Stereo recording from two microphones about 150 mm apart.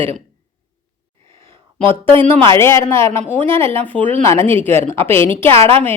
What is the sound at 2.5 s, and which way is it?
Speech, 20° left (ahead or behind).